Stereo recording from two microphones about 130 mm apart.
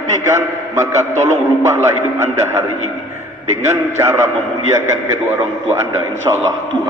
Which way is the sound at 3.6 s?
20° right (ahead or behind).